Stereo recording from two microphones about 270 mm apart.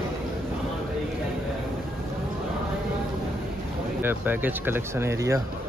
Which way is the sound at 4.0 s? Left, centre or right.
Centre.